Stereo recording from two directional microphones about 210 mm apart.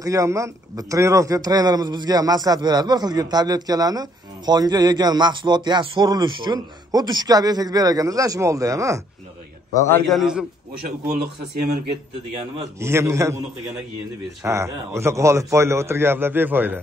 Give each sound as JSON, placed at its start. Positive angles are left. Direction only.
{"t": 0.0, "sound": "a man's voice", "side_deg": -15}
{"t": 9.8, "sound": "a man's voice", "side_deg": 10}
{"t": 10.0, "sound": "a man's voice", "side_deg": 0}
{"t": 12.8, "sound": "a man's voice", "side_deg": -15}
{"t": 14.4, "sound": "a man's voice", "side_deg": -15}